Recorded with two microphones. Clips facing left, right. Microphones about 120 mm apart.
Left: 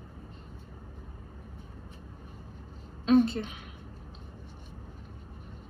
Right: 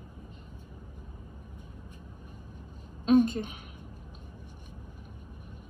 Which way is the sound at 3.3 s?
50° right (ahead or behind).